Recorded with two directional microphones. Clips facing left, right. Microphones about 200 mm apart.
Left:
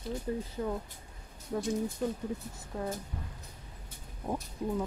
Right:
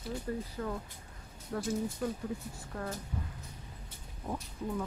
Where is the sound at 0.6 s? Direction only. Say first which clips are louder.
Left 3 dB; 20° left (ahead or behind).